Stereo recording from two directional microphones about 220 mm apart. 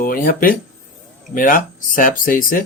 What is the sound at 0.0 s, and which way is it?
Speech, 40° left (ahead or behind).